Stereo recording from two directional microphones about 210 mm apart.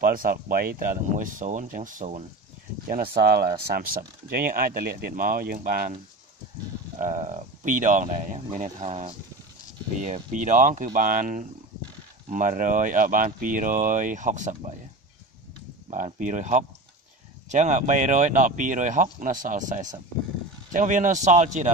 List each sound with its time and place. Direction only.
0.0 s speech: 40° right (ahead or behind)
2.9 s speech: 45° right (ahead or behind)
7.0 s speech: 35° right (ahead or behind)
15.9 s speech: 35° right (ahead or behind)